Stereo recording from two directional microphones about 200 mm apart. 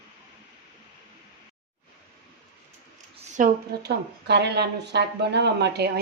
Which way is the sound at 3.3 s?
40° right (ahead or behind).